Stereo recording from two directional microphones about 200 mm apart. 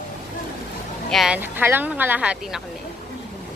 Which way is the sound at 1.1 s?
5° right (ahead or behind).